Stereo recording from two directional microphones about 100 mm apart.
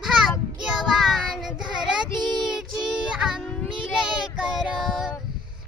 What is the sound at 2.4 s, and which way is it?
Music, 5° right (ahead or behind).